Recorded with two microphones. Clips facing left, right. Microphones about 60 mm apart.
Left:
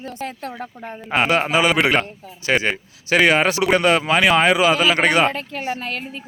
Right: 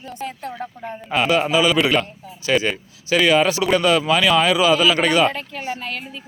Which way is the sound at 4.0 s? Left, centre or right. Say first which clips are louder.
Left 1 dB; left.